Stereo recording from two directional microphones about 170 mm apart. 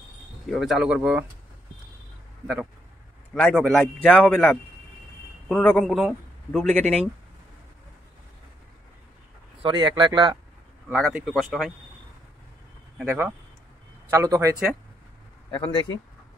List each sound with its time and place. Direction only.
0.5 s a man's voice: centre (ahead or behind)
2.4 s a man's voice: centre (ahead or behind)
9.6 s speech: 30° right (ahead or behind)
10.9 s a man's voice: 5° right (ahead or behind)
13.0 s speech: 10° right (ahead or behind)